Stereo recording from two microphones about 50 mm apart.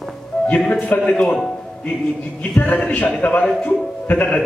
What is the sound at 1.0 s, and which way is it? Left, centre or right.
Speech, centre.